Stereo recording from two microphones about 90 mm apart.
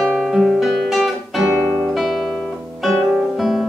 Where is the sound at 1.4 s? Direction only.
5° right (ahead or behind).